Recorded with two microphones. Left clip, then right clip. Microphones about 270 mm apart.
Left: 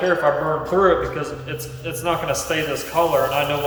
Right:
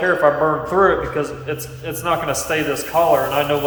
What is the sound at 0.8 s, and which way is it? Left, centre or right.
A man's voice, centre.